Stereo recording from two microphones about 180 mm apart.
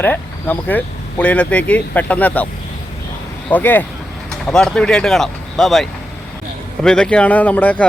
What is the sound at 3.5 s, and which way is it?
Speech, 10° left (ahead or behind).